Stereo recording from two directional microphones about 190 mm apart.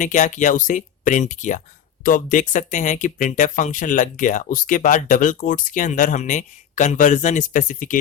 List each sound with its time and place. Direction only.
0.0 s speech: 40° left (ahead or behind)